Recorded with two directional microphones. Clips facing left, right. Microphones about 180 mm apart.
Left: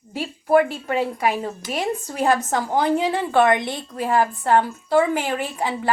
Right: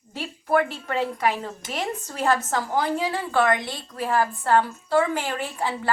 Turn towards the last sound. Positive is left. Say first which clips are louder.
# left 3 dB
turn(degrees=15)  # may be behind; listen again after turning